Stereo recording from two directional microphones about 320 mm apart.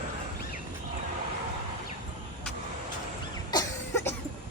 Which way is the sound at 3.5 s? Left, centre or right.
Centre.